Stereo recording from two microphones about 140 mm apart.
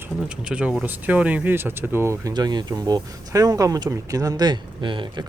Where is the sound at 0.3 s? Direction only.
10° right (ahead or behind).